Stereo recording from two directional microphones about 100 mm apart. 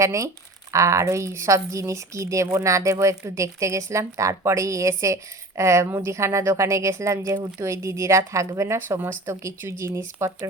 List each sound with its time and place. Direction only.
0.0 s a woman's voice: 30° right (ahead or behind)